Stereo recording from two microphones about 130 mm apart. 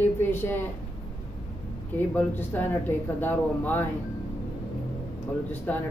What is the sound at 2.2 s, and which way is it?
Speech, 15° left (ahead or behind).